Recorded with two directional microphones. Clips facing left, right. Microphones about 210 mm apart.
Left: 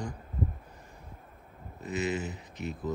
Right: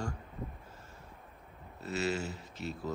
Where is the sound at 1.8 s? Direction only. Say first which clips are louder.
Left 2 dB; 15° left (ahead or behind).